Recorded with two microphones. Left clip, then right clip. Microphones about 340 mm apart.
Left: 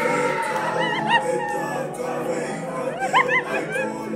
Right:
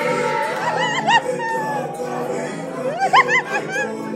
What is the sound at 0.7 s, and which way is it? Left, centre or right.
Music, centre.